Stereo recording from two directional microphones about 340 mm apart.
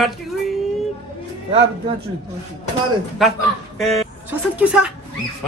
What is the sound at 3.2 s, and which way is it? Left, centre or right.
A man's voice, centre.